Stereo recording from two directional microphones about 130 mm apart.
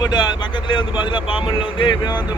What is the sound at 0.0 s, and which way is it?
Speech, 35° left (ahead or behind).